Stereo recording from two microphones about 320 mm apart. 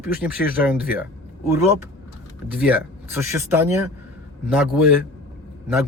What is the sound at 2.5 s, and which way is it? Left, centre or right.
Speech, centre.